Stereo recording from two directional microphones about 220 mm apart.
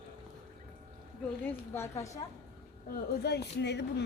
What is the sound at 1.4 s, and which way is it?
Speech, 10° left (ahead or behind).